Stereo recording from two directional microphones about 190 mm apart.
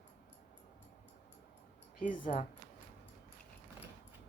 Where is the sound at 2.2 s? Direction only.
40° left (ahead or behind).